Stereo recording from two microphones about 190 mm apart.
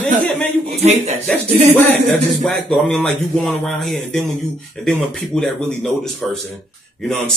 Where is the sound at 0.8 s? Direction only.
35° right (ahead or behind).